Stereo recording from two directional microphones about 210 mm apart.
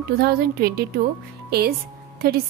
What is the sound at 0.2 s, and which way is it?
Speech, 50° right (ahead or behind).